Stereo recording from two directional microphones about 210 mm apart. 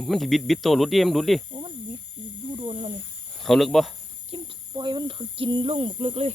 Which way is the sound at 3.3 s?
Centre (ahead or behind).